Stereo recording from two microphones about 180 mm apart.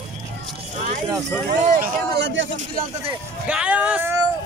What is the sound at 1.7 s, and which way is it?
Speech, 50° right (ahead or behind).